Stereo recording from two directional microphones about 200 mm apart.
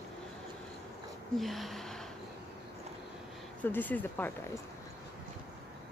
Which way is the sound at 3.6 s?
10° left (ahead or behind).